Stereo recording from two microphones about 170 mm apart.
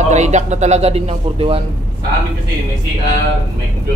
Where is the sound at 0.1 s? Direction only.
45° right (ahead or behind).